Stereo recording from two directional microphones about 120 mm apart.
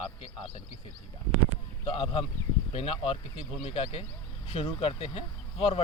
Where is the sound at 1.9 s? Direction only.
50° left (ahead or behind).